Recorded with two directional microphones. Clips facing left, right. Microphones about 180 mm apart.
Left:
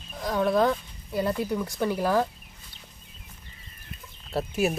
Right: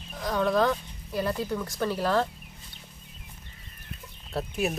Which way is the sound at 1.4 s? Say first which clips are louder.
Left 2 dB; 15° left (ahead or behind).